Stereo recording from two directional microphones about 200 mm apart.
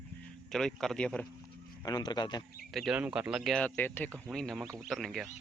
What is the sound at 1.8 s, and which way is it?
Speech, 20° left (ahead or behind).